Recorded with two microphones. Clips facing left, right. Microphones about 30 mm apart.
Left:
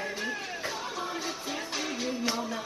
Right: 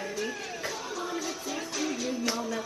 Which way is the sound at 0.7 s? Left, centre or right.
Left.